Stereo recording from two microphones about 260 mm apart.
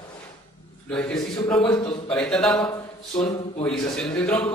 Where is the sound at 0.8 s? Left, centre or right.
Centre.